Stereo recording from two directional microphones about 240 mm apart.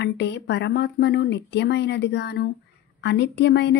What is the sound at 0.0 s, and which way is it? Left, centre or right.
Speech, left.